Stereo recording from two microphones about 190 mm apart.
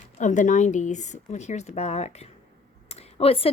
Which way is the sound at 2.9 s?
35° left (ahead or behind).